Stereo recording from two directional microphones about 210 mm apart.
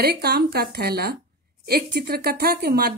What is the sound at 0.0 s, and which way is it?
A woman's voice, 50° right (ahead or behind).